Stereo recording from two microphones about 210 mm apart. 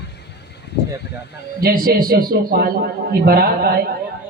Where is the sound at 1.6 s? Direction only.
45° right (ahead or behind).